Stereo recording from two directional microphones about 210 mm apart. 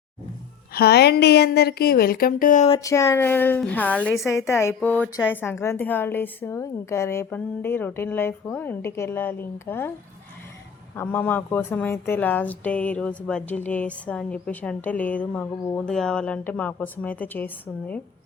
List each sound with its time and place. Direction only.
0.7 s a woman's voice: 50° left (ahead or behind)
2.7 s a woman's voice: 15° left (ahead or behind)
10.9 s a woman's voice: 10° left (ahead or behind)